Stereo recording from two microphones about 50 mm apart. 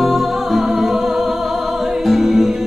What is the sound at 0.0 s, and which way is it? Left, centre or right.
Music, centre.